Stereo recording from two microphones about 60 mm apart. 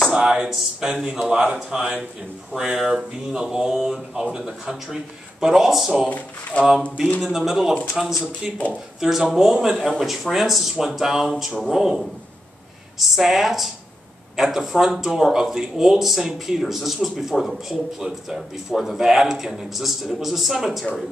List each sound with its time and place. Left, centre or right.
0.1 s speech: centre
6.0 s speech: left
7.2 s speech: centre
9.8 s speech: centre